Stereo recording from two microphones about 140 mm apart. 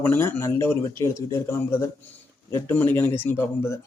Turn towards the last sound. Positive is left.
turn(degrees=20)  # may be behind; listen again after turning